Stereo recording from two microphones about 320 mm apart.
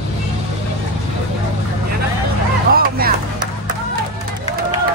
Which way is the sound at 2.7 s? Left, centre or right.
Right.